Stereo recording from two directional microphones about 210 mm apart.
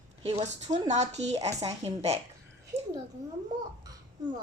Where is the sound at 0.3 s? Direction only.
35° right (ahead or behind).